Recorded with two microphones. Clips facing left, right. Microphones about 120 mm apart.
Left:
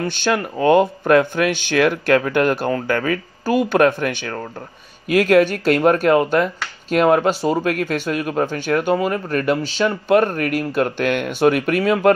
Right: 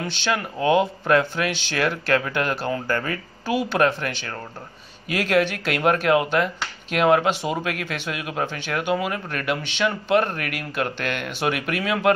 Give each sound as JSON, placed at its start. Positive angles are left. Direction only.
{"t": 0.0, "sound": "speech", "side_deg": 45}
{"t": 3.4, "sound": "speech", "side_deg": 50}